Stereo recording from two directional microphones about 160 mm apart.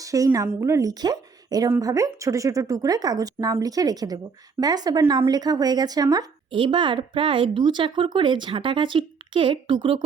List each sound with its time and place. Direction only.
0.0 s speech: 20° right (ahead or behind)